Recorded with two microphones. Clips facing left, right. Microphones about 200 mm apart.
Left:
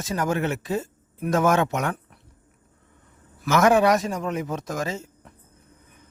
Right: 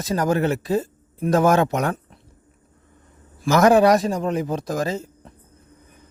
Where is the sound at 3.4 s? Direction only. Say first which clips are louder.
Right 4 dB; 35° right (ahead or behind).